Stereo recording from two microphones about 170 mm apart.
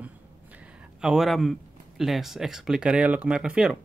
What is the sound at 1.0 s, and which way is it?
Speech, centre (ahead or behind).